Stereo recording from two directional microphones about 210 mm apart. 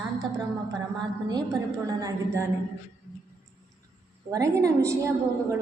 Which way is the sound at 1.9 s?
15° right (ahead or behind).